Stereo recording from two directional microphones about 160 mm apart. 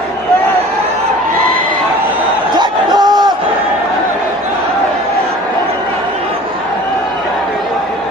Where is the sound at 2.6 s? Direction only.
25° right (ahead or behind).